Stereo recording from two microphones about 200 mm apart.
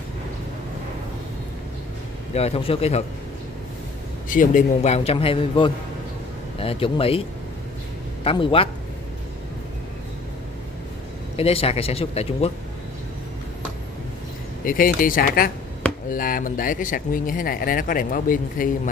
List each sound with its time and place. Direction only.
2.3 s a man's voice: 30° left (ahead or behind)
4.3 s a man's voice: 40° left (ahead or behind)
11.3 s speech: 30° left (ahead or behind)
14.6 s speech: 45° left (ahead or behind)